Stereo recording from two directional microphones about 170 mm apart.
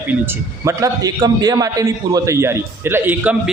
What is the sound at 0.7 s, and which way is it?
A man's voice, 20° right (ahead or behind).